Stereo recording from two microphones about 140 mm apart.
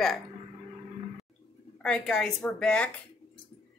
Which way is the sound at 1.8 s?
5° left (ahead or behind).